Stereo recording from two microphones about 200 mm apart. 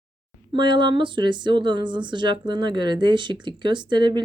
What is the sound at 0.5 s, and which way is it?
A woman's voice, 25° right (ahead or behind).